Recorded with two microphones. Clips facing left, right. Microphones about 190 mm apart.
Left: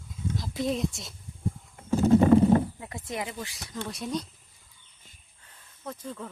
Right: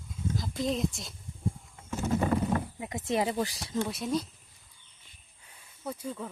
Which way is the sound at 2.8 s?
20° right (ahead or behind).